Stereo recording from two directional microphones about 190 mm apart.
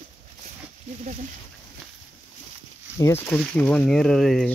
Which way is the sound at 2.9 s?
15° left (ahead or behind).